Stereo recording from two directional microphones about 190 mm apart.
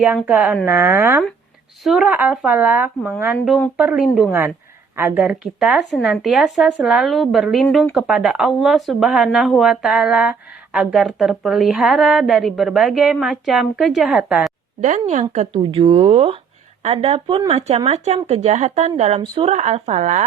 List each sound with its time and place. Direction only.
0.2 s speech: 10° right (ahead or behind)
1.8 s speech: centre (ahead or behind)
4.3 s speech: 15° right (ahead or behind)
14.8 s speech: 40° right (ahead or behind)